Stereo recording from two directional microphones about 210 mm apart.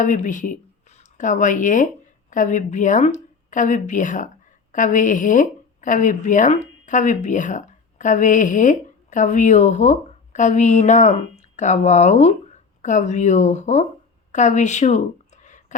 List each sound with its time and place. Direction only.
0.0 s a woman's voice: 35° left (ahead or behind)